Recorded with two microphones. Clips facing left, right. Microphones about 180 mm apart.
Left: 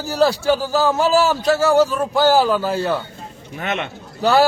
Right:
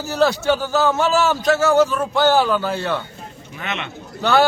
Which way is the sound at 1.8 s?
35° left (ahead or behind).